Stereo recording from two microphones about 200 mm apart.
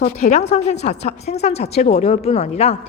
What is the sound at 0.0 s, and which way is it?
A woman's voice, 35° left (ahead or behind).